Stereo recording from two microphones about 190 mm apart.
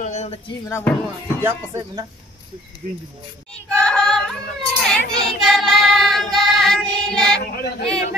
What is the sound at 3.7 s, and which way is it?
Yodeling, 5° left (ahead or behind).